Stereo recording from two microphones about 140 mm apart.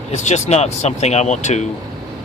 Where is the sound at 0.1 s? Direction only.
55° left (ahead or behind).